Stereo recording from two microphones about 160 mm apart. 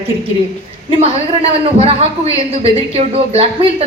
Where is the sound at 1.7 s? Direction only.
40° right (ahead or behind).